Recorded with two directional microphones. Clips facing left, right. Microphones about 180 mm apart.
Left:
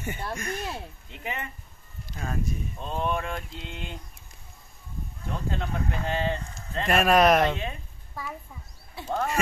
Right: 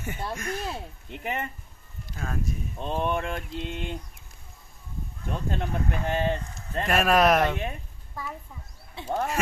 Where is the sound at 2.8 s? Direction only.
20° right (ahead or behind).